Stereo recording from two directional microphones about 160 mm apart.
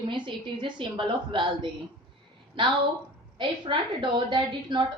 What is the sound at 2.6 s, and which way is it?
A woman's voice, 30° right (ahead or behind).